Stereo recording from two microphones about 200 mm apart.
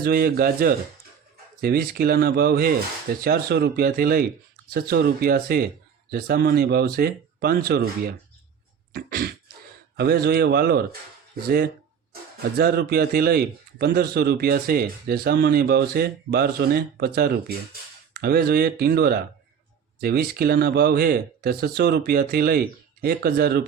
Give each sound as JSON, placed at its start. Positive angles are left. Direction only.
{"t": 0.0, "sound": "a man's voice", "side_deg": -50}
{"t": 8.9, "sound": "a sound", "side_deg": -50}
{"t": 10.0, "sound": "a man's voice", "side_deg": -50}